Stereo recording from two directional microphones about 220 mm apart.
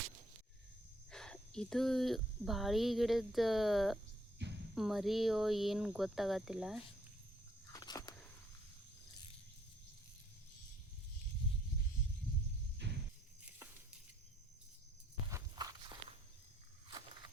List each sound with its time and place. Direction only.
1.1 s speech: 5° left (ahead or behind)
7.7 s biting: 15° left (ahead or behind)
12.8 s music: 50° right (ahead or behind)
15.3 s walk: 15° right (ahead or behind)